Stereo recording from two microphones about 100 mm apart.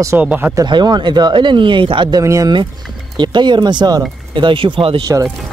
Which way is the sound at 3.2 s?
50° right (ahead or behind).